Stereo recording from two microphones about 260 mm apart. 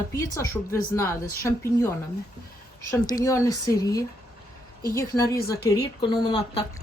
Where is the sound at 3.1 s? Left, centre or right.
Centre.